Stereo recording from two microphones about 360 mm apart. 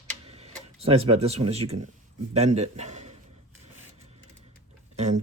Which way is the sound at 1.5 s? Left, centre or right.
Centre.